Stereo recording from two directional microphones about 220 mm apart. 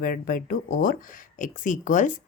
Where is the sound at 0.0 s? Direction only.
40° left (ahead or behind).